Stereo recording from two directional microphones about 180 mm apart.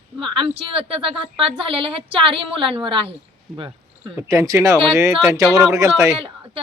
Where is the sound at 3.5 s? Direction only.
5° right (ahead or behind).